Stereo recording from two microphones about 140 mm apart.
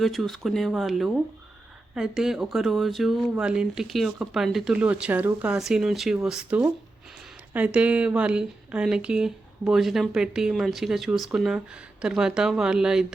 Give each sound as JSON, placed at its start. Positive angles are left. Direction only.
{"t": 0.0, "sound": "speech", "side_deg": 0}